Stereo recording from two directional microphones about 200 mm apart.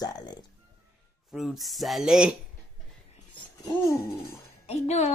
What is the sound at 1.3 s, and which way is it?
Speech, centre (ahead or behind).